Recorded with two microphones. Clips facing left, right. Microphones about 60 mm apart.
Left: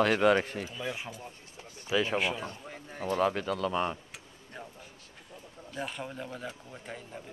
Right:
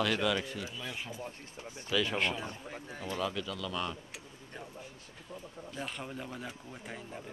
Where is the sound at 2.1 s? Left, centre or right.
Centre.